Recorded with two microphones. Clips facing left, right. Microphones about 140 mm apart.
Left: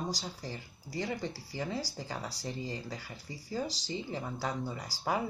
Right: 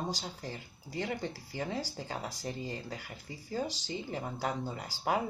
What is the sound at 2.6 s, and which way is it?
Speech, 55° right (ahead or behind).